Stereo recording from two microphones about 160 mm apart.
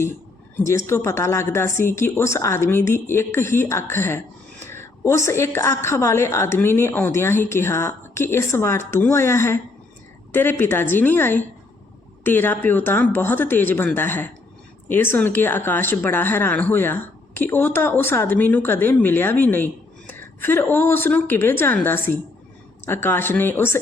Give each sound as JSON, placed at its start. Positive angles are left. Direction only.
{"t": 0.9, "sound": "speech", "side_deg": 15}